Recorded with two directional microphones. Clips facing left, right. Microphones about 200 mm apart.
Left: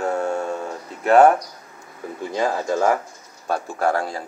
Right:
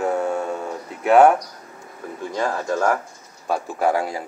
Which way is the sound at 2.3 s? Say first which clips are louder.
Left 1 dB; 20° left (ahead or behind).